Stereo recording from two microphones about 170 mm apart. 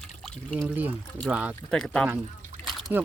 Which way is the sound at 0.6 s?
10° right (ahead or behind).